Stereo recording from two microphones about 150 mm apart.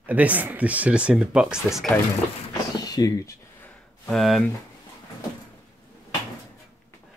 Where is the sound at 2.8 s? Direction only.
25° left (ahead or behind).